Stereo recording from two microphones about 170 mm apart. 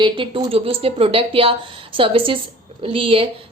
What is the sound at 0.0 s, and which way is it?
Speech, 30° right (ahead or behind).